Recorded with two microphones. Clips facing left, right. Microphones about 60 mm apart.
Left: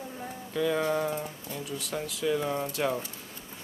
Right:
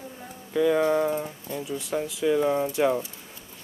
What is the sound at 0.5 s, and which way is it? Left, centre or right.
Speech, centre.